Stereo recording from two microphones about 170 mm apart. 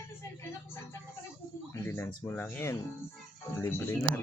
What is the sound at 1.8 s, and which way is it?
Speech, 15° left (ahead or behind).